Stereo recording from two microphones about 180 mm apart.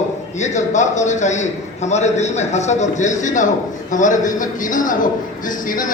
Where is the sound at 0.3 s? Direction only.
40° left (ahead or behind).